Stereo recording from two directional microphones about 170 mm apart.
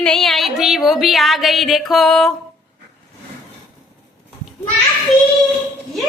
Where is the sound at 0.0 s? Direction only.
5° left (ahead or behind).